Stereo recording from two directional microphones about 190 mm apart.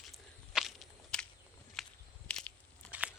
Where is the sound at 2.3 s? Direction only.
5° left (ahead or behind).